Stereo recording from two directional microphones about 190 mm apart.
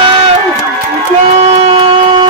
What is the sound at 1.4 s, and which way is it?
Music, 30° right (ahead or behind).